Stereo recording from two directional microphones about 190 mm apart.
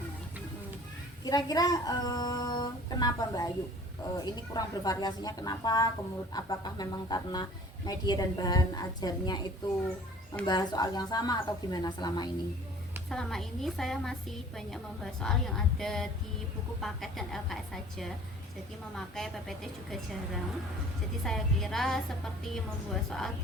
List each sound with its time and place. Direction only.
1.2 s speech: 20° left (ahead or behind)
13.1 s a woman's voice: centre (ahead or behind)
23.0 s a woman's voice: centre (ahead or behind)